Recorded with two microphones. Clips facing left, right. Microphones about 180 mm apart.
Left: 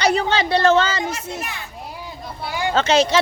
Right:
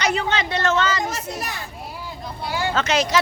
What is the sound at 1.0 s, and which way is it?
Speech, 35° right (ahead or behind).